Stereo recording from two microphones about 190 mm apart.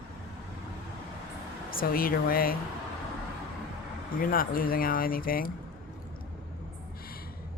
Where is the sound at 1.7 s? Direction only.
50° left (ahead or behind).